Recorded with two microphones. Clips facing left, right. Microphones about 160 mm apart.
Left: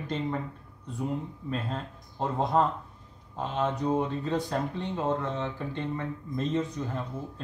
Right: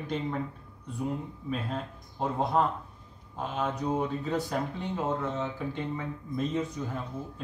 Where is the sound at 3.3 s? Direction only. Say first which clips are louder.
Left 2 dB; 5° right (ahead or behind).